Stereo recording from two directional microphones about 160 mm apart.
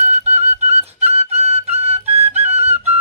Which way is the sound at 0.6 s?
45° right (ahead or behind).